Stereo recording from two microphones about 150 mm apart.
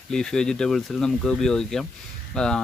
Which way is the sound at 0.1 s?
5° left (ahead or behind).